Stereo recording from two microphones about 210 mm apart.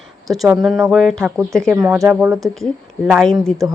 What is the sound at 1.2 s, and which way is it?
Speech, 15° right (ahead or behind).